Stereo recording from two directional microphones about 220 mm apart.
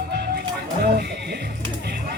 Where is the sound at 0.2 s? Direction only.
45° right (ahead or behind).